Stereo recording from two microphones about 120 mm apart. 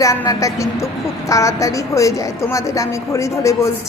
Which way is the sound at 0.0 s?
25° left (ahead or behind).